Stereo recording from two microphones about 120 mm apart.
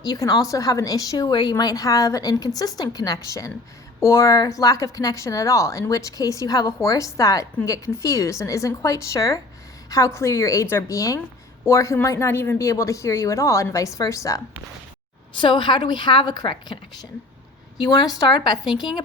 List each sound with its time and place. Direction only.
0.0 s a woman's voice: 30° left (ahead or behind)
15.4 s a woman's voice: 40° left (ahead or behind)